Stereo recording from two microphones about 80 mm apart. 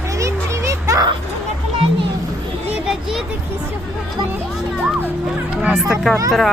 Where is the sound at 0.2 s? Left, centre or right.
Right.